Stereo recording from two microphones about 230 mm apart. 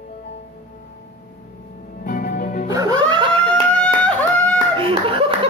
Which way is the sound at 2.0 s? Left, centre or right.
Left.